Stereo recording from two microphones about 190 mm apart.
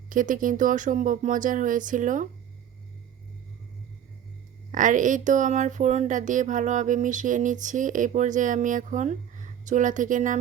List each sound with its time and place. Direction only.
0.1 s speech: 45° right (ahead or behind)
4.7 s speech: 45° right (ahead or behind)